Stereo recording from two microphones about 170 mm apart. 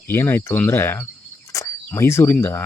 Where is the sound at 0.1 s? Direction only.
15° left (ahead or behind).